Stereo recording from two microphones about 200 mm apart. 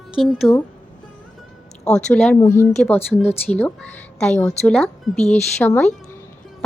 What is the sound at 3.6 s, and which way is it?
A woman's voice, 5° left (ahead or behind).